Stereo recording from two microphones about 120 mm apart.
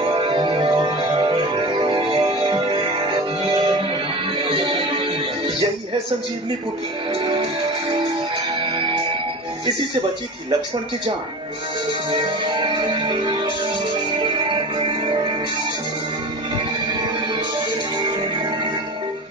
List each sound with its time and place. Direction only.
0.0 s music: 45° right (ahead or behind)
4.5 s music: 45° right (ahead or behind)
12.1 s music: 40° right (ahead or behind)